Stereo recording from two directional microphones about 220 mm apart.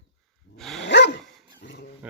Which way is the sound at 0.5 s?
Centre (ahead or behind).